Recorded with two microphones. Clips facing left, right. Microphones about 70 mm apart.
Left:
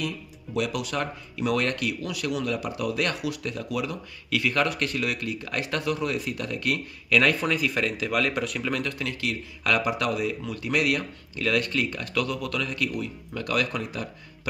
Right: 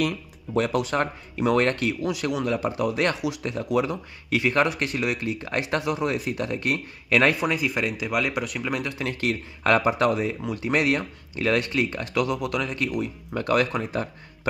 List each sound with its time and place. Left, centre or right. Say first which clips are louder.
0.6 s speech: right 5 dB; right
7.3 s speech: right 1 dB; centre
9.0 s speech: right 3 dB; right